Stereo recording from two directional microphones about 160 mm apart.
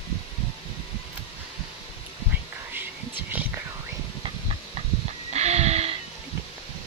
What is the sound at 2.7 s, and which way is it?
Whispering, 10° right (ahead or behind).